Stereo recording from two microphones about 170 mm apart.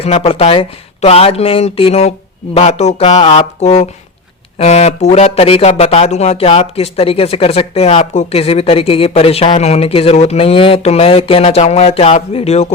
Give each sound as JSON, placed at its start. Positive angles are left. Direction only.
{"t": 0.0, "sound": "speech", "side_deg": 35}